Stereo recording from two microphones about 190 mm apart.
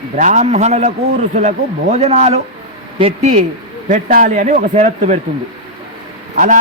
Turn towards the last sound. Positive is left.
turn(degrees=-45)  # may be behind; listen again after turning